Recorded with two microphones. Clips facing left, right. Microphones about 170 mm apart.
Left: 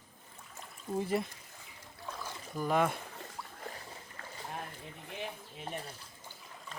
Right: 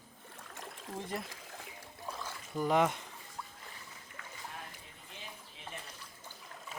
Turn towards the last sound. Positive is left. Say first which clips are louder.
# left 6 dB
turn(degrees=35)  # may be behind; listen again after turning